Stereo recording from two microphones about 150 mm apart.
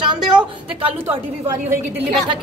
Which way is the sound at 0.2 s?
5° right (ahead or behind).